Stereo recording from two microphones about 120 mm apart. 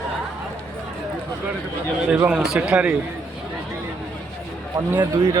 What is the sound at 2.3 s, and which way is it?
Speech, 5° right (ahead or behind).